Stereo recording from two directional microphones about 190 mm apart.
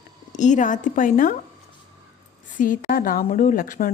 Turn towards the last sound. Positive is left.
turn(degrees=45)  # may be behind; listen again after turning